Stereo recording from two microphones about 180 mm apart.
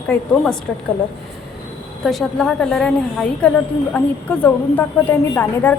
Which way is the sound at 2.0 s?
Centre (ahead or behind).